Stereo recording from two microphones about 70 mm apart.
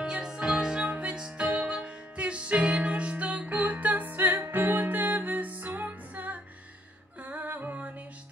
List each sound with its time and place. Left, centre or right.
0.0 s music: centre; by 7.9 s right